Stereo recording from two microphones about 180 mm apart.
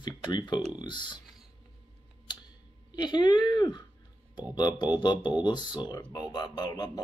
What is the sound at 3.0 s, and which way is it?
Speech, 25° left (ahead or behind).